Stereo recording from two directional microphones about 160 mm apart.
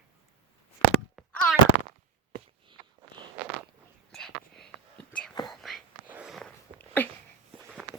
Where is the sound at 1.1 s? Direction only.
Centre (ahead or behind).